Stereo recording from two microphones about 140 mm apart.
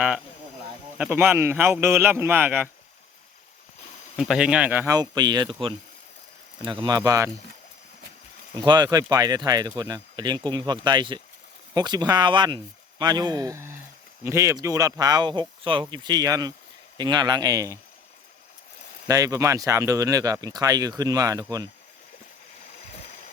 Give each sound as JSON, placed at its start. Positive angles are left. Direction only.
{"t": 0.9, "sound": "speech", "side_deg": -10}
{"t": 4.2, "sound": "speech", "side_deg": -5}
{"t": 4.9, "sound": "speech", "side_deg": -30}
{"t": 8.5, "sound": "speech", "side_deg": -30}
{"t": 19.0, "sound": "speech", "side_deg": -25}